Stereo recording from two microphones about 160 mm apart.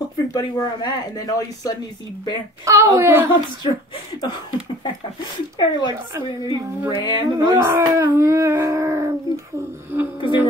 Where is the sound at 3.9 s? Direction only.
30° left (ahead or behind).